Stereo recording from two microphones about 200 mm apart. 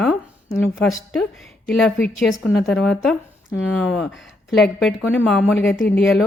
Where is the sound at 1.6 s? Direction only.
5° left (ahead or behind).